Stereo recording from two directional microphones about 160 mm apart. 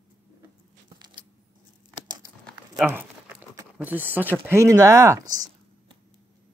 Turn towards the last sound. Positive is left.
turn(degrees=-25)  # may be behind; listen again after turning